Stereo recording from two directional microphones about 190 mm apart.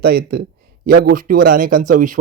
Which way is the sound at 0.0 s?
55° right (ahead or behind).